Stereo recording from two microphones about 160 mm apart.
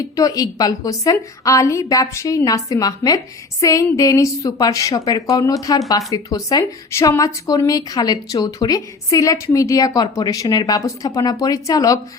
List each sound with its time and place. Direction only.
0.2 s speech: 20° left (ahead or behind)